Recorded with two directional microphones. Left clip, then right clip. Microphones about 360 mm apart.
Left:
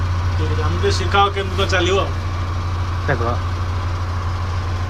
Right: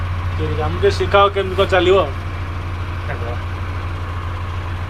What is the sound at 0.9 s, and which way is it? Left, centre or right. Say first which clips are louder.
Speech: right 3 dB; centre.